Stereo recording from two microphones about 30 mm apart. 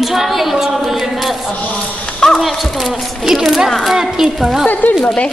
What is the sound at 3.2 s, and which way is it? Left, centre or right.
A woman's voice, centre.